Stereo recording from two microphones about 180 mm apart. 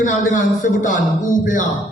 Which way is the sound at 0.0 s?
45° left (ahead or behind).